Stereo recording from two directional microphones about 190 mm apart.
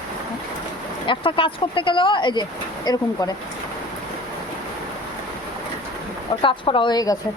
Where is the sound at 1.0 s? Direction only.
25° left (ahead or behind).